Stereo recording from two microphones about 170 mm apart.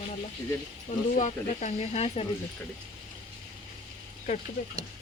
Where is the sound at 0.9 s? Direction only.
45° left (ahead or behind).